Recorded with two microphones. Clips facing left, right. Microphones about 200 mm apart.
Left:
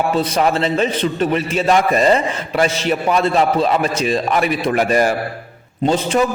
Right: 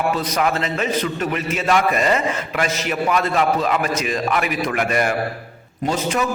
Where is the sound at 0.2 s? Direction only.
30° left (ahead or behind).